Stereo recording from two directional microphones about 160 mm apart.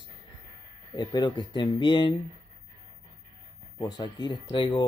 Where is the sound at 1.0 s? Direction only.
25° left (ahead or behind).